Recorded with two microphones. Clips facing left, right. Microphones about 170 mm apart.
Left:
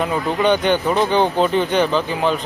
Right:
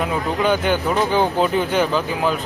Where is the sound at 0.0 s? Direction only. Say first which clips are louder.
Left 2 dB; 5° right (ahead or behind).